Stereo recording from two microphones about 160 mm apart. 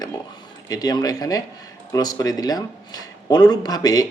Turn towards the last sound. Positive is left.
turn(degrees=25)  # may be behind; listen again after turning